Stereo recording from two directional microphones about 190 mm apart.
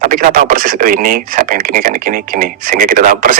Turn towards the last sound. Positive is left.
turn(degrees=-50)  # may be behind; listen again after turning